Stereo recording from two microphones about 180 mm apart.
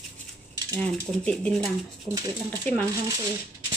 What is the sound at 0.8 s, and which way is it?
Speech, 5° left (ahead or behind).